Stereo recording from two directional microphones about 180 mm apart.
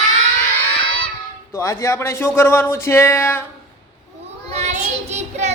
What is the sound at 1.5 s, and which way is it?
A woman's voice, 15° left (ahead or behind).